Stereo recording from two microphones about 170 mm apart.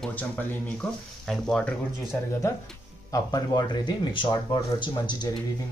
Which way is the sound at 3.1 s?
20° left (ahead or behind).